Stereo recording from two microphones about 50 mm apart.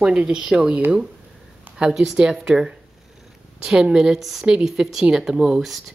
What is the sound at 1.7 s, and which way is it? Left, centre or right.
A woman's voice, centre.